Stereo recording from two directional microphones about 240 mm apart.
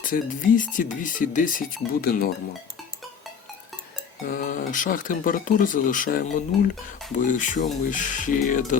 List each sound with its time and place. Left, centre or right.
0.0 s speech: left
4.3 s speech: left